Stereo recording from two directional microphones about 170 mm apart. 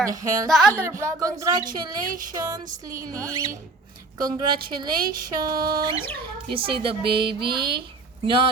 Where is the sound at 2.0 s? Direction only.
55° right (ahead or behind).